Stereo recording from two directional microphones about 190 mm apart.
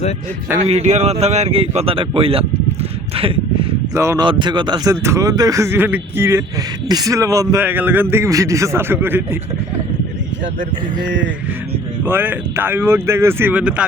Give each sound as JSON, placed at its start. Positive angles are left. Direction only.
{"t": 0.6, "sound": "speech", "side_deg": -35}
{"t": 3.9, "sound": "speech", "side_deg": -15}
{"t": 12.0, "sound": "speech", "side_deg": -10}